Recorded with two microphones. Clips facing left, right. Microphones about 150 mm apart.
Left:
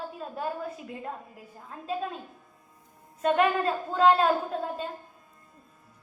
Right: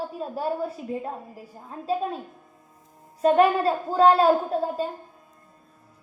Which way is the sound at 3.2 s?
30° right (ahead or behind).